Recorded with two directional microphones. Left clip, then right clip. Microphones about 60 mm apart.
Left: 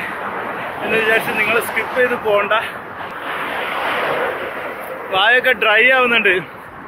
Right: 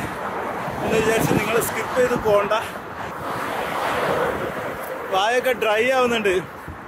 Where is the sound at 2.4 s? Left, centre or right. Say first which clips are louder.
Left 5 dB; right.